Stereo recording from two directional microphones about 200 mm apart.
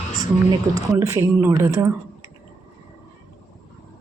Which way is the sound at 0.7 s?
15° right (ahead or behind).